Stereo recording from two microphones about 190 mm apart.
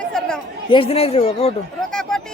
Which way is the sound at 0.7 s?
30° left (ahead or behind).